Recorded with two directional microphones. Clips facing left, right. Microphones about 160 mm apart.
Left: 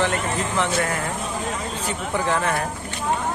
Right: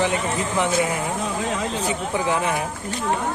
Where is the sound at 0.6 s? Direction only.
15° right (ahead or behind).